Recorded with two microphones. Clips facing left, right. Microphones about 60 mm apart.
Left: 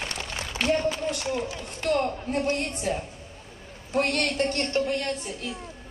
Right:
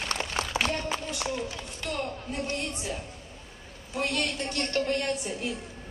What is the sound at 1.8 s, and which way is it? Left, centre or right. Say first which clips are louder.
Speech: left 9 dB; left.